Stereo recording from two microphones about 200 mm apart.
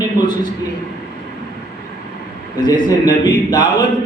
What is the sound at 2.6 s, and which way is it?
Speech, 20° left (ahead or behind).